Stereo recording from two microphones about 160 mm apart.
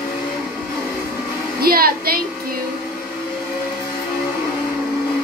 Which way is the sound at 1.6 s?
70° right (ahead or behind).